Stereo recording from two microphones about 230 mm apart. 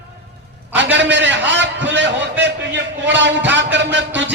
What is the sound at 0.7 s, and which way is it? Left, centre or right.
A man's voice, right.